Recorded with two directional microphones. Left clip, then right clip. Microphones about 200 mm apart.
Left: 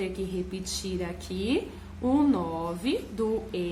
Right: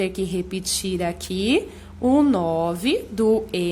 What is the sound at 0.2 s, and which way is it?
A woman's voice, 45° right (ahead or behind).